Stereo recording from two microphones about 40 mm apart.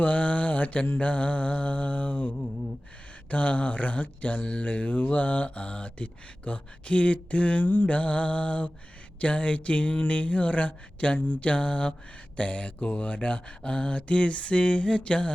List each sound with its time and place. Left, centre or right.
0.0 s music: left
0.9 s mantra: left
4.4 s a sound: left
4.6 s mantra: left
7.6 s music: left
7.9 s mantra: left
13.1 s a sound: left